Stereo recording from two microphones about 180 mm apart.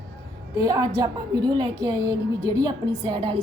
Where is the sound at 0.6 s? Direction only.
20° right (ahead or behind).